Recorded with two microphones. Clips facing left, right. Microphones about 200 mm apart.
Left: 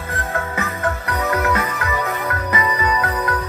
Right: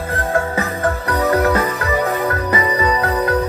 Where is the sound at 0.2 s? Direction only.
30° right (ahead or behind).